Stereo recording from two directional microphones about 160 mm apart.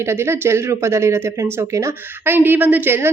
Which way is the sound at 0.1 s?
15° right (ahead or behind).